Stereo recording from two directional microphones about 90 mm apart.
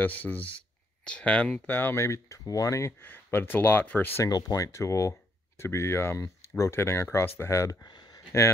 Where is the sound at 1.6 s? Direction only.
25° left (ahead or behind).